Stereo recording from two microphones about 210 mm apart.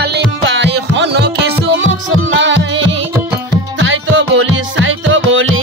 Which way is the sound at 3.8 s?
65° right (ahead or behind).